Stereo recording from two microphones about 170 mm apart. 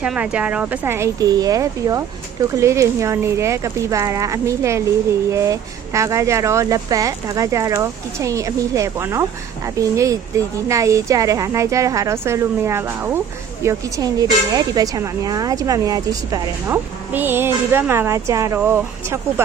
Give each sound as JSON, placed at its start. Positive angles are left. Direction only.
{"t": 0.0, "sound": "speech", "side_deg": -5}